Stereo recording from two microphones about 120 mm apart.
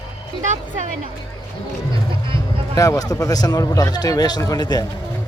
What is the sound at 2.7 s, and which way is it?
A man's voice, 30° left (ahead or behind).